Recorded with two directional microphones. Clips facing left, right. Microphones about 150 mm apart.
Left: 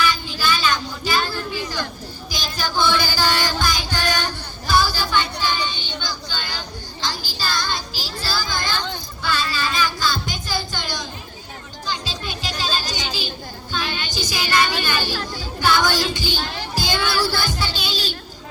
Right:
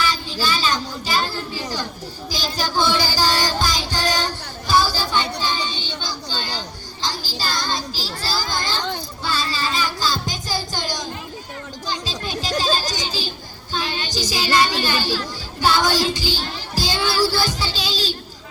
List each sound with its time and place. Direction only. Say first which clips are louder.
0.0 s a child's voice: left 1 dB; 35° right (ahead or behind)
2.3 s child singing: right 2 dB; 35° right (ahead or behind)
7.1 s music: even; 35° right (ahead or behind)
8.2 s children playing: even; 35° right (ahead or behind)
9.2 s music: left 1 dB; 35° right (ahead or behind)
11.9 s children playing: right 1 dB; 40° right (ahead or behind)
13.7 s child singing: right 2 dB; 35° right (ahead or behind)